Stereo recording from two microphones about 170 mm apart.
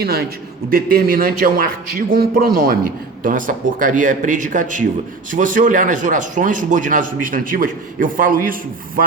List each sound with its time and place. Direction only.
0.0 s a man's voice: 65° right (ahead or behind)